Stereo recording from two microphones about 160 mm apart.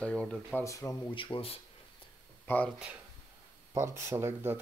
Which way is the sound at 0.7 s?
20° left (ahead or behind).